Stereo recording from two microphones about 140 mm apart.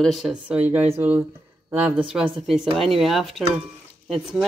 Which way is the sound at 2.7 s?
Centre (ahead or behind).